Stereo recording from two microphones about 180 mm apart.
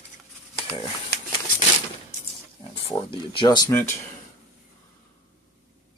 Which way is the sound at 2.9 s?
25° left (ahead or behind).